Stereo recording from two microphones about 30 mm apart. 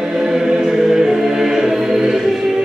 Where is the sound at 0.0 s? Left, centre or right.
Centre.